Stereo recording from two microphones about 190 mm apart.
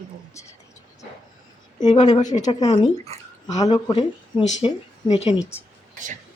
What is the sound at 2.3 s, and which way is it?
Speech, 40° left (ahead or behind).